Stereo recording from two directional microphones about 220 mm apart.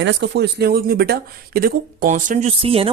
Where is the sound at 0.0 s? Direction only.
50° right (ahead or behind).